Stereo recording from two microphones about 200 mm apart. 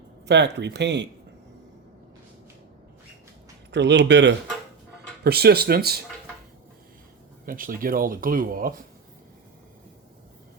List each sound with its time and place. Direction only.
0.3 s speech: 60° right (ahead or behind)
3.7 s speech: 60° right (ahead or behind)
7.4 s speech: 45° right (ahead or behind)